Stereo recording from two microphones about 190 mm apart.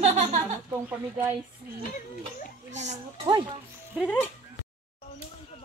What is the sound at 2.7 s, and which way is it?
Speech, 40° right (ahead or behind).